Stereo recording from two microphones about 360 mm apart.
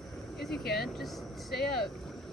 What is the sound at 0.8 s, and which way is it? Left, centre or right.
Speech, centre.